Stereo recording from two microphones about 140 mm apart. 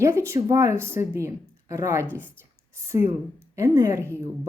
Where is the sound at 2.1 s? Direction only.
10° left (ahead or behind).